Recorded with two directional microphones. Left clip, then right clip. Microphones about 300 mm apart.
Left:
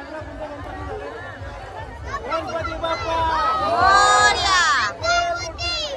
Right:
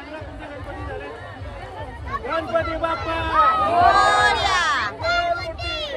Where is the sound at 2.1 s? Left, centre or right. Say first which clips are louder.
Even; centre.